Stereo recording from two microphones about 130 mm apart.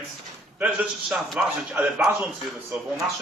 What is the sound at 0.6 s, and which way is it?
Speech, 10° right (ahead or behind).